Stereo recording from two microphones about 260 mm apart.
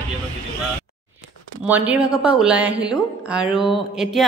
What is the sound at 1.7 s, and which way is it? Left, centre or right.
A woman's voice, centre.